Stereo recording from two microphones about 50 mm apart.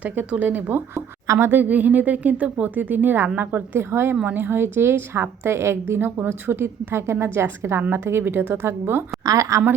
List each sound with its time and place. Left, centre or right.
0.0 s speech: right
0.9 s speech: right
1.5 s speech: right
3.8 s a woman's voice: right
7.8 s speech: right
8.0 s a woman's voice: right
9.4 s a woman's voice: right